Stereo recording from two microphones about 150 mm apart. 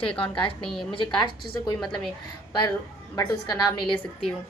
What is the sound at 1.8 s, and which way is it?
Speech, 5° left (ahead or behind).